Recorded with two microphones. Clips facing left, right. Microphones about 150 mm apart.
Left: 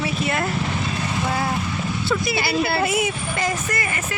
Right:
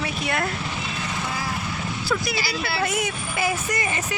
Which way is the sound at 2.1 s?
Centre (ahead or behind).